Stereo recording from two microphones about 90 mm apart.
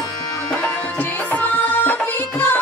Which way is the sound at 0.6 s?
20° left (ahead or behind).